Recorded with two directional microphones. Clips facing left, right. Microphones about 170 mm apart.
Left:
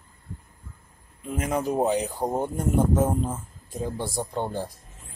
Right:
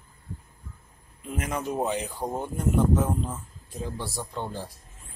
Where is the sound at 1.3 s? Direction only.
30° left (ahead or behind).